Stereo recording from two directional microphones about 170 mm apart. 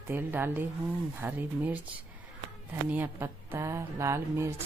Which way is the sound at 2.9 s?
10° right (ahead or behind).